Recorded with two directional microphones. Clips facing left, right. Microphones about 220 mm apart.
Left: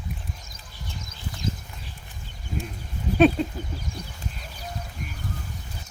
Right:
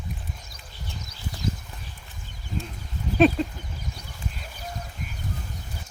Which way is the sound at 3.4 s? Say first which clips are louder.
Even; centre (ahead or behind).